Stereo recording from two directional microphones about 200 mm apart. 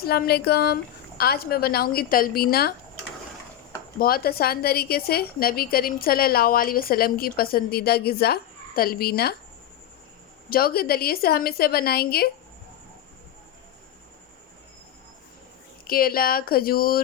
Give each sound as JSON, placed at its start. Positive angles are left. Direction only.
{"t": 0.0, "sound": "a woman's voice", "side_deg": 50}
{"t": 3.9, "sound": "a woman's voice", "side_deg": 50}
{"t": 10.5, "sound": "a woman's voice", "side_deg": 50}
{"t": 15.8, "sound": "a woman's voice", "side_deg": 50}